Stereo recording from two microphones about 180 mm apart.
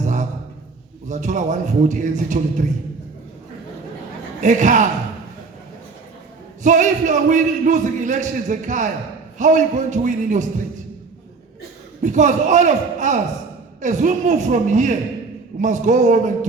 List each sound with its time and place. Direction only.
0.0 s a sound: 45° right (ahead or behind)
1.0 s a man's voice: 45° right (ahead or behind)
4.4 s a man's voice: 45° right (ahead or behind)
6.6 s a man's voice: 45° right (ahead or behind)
12.0 s a man's voice: 45° right (ahead or behind)